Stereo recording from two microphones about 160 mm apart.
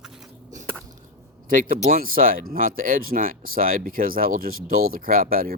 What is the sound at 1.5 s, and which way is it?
Speech, 60° right (ahead or behind).